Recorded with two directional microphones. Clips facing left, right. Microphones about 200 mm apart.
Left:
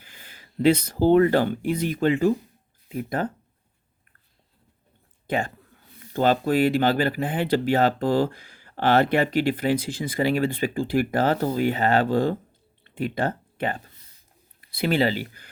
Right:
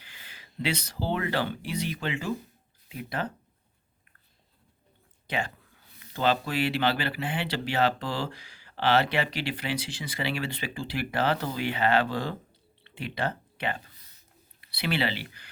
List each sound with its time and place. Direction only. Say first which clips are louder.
0.0 s speech: left 3 dB; 45° left (ahead or behind)
6.1 s speech: left 6 dB; 45° left (ahead or behind)